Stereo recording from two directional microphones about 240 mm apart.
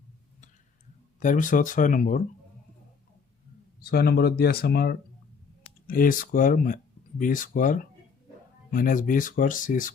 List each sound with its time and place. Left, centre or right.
1.2 s speech: left
3.8 s speech: left